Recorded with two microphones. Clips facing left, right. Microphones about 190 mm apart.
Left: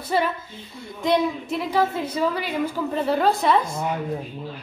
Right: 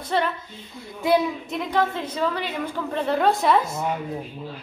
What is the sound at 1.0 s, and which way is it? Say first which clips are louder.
Speech: even; 5° right (ahead or behind).